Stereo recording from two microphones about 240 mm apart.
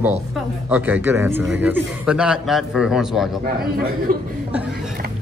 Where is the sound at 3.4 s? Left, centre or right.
Right.